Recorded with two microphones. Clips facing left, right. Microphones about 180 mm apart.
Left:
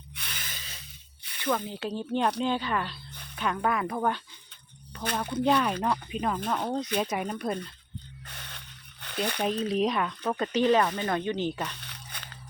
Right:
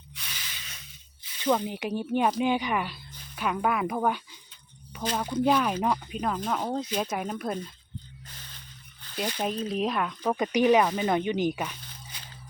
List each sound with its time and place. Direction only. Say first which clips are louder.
0.2 s spray: left 2 dB; 55° left (ahead or behind)
1.2 s snake: left 2 dB; 65° left (ahead or behind)
1.5 s speech: right 3 dB; 15° right (ahead or behind)
8.2 s a sound: left 3 dB; 70° left (ahead or behind)
9.6 s speech: left 2 dB; centre (ahead or behind)
10.2 s speech: right 2 dB; 15° right (ahead or behind)
11.8 s a sound: left 1 dB; 70° left (ahead or behind)